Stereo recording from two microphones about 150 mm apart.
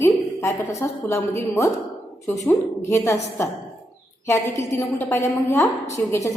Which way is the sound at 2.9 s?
20° left (ahead or behind).